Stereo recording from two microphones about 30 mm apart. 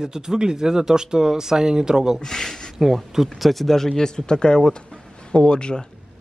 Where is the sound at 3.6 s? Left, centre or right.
Centre.